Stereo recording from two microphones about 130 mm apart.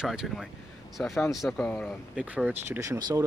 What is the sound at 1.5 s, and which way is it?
Speech, 10° left (ahead or behind).